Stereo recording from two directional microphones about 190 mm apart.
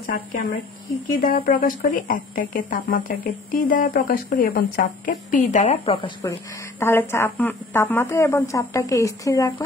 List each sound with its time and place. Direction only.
0.0 s speech: 50° left (ahead or behind); by 6.3 s 25° left (ahead or behind)
6.8 s speech: 10° left (ahead or behind)